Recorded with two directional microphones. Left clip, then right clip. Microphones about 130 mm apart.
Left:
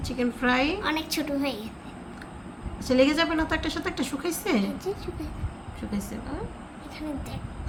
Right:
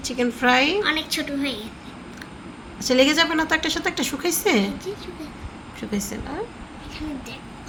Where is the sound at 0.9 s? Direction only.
75° left (ahead or behind).